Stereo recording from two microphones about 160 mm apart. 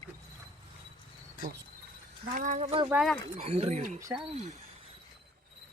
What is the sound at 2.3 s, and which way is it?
Speech, 50° right (ahead or behind).